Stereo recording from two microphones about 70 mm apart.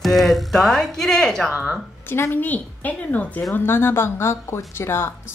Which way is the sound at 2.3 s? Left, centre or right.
Left.